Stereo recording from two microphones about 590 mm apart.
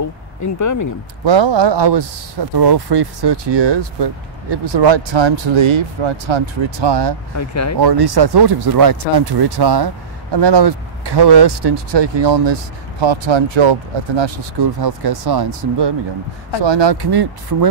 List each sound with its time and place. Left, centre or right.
0.0 s a sound: left
1.2 s speech: right
7.3 s speech: left
7.8 s speech: right